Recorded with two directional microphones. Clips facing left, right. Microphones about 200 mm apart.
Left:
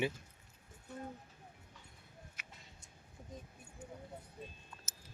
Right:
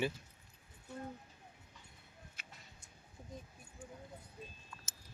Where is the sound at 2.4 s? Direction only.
30° right (ahead or behind).